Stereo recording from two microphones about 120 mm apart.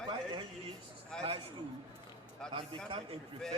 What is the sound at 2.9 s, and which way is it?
Speech, 60° right (ahead or behind).